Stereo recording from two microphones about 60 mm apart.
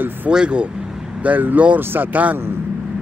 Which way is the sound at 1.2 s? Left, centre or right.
Right.